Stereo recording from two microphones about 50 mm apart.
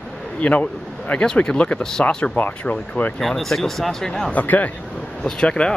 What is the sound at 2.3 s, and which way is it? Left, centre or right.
Speech, left.